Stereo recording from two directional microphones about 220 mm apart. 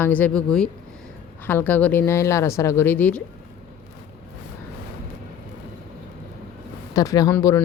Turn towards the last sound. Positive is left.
turn(degrees=10)  # may be behind; listen again after turning